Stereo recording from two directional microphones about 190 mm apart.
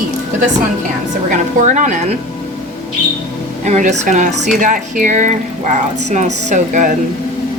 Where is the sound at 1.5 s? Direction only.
40° right (ahead or behind).